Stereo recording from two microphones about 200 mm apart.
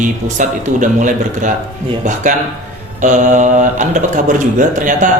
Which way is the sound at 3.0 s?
40° right (ahead or behind).